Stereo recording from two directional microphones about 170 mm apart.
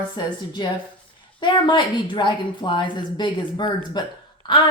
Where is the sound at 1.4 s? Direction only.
25° left (ahead or behind).